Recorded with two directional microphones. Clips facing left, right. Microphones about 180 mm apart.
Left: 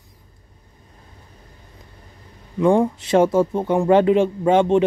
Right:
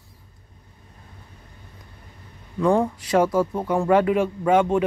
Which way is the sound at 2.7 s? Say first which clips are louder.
Left 3 dB; 15° left (ahead or behind).